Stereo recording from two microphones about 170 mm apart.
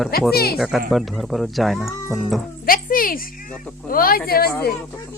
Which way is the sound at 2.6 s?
55° left (ahead or behind).